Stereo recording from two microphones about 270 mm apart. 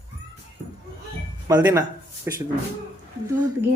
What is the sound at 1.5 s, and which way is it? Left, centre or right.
Speech, centre.